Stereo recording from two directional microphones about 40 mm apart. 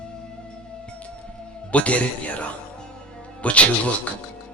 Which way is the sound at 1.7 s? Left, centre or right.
Left.